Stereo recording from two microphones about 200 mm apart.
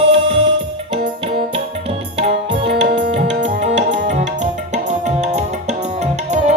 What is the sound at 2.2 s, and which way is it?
Music, 30° right (ahead or behind).